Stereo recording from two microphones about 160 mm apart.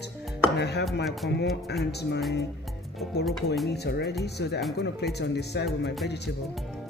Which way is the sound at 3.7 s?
90° left.